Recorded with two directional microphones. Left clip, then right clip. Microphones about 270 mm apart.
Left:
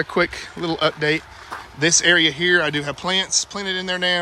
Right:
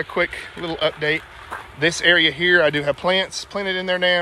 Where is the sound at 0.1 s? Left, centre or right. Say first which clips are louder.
Left 1 dB; left.